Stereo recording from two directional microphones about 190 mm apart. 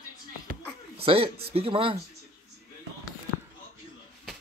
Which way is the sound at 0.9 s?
30° right (ahead or behind).